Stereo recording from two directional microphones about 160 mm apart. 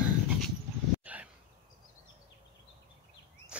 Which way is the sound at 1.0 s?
10° right (ahead or behind).